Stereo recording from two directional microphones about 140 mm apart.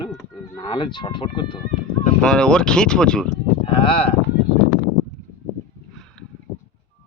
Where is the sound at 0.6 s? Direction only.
35° left (ahead or behind).